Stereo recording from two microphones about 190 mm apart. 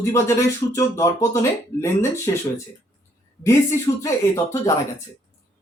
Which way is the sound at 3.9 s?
20° left (ahead or behind).